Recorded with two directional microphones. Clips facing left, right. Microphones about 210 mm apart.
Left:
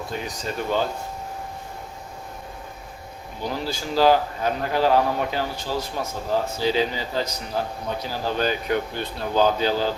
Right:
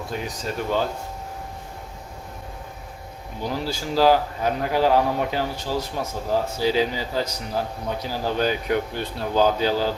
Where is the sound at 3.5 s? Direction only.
5° right (ahead or behind).